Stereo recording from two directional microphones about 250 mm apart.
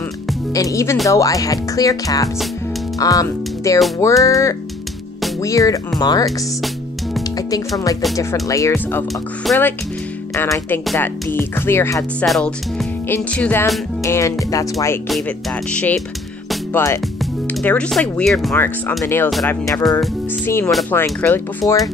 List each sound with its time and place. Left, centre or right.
0.5 s speech: centre
8.2 s speech: centre
16.4 s music: centre
17.2 s speech: centre